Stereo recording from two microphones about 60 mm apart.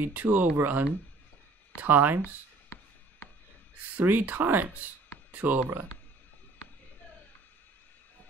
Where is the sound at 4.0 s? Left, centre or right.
Right.